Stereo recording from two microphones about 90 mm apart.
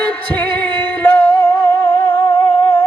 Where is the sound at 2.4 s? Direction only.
25° left (ahead or behind).